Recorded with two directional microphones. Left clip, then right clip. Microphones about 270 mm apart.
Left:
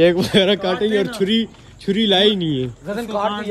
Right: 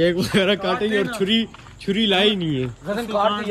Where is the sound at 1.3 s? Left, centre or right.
Left.